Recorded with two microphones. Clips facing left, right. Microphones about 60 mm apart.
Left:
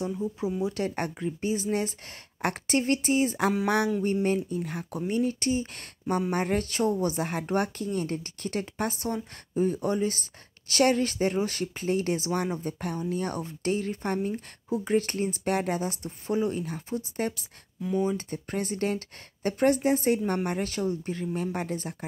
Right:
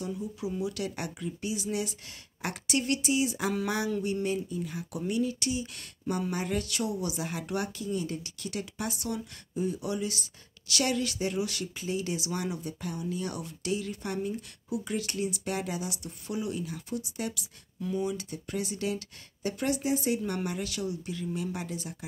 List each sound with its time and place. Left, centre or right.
0.0 s speech: left